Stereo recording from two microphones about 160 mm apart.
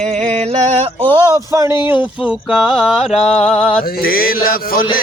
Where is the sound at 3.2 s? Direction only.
40° left (ahead or behind).